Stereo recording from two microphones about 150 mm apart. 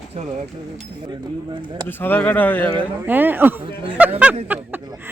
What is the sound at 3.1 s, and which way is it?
Speech, 10° right (ahead or behind).